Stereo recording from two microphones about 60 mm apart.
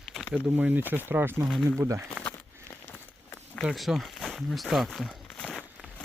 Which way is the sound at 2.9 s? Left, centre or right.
Left.